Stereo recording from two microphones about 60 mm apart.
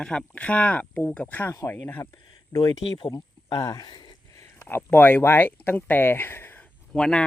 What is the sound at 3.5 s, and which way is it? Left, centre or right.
Speech, left.